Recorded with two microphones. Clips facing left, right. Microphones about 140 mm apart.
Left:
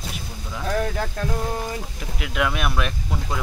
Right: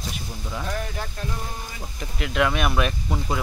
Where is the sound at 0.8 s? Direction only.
85° left.